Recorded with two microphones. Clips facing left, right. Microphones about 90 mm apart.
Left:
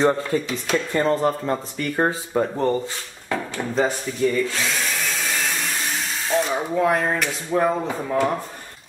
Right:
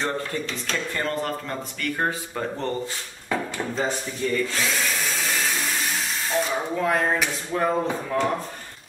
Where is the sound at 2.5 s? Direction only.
10° left (ahead or behind).